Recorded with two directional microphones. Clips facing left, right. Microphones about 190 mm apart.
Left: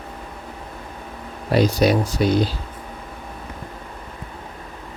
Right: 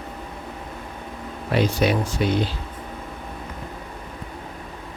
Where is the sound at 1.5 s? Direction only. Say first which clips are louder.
Left 4 dB; 40° left (ahead or behind).